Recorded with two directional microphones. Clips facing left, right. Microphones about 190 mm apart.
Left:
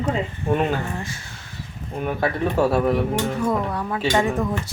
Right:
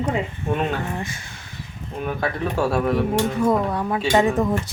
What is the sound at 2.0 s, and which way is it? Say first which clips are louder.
Speech: left 2 dB; 5° left (ahead or behind).